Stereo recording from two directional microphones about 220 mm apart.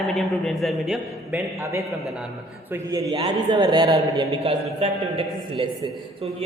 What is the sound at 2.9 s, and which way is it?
A man's voice, 20° right (ahead or behind).